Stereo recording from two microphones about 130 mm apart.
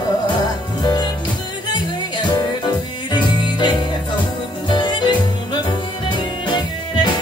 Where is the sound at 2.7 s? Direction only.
35° left (ahead or behind).